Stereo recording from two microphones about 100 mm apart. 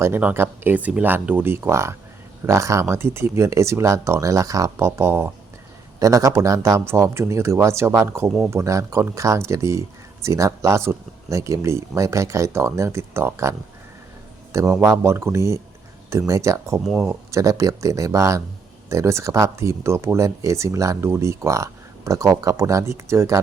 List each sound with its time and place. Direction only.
0.2 s speech: 15° right (ahead or behind)
16.8 s speech: 10° right (ahead or behind)
17.1 s speech: 35° right (ahead or behind)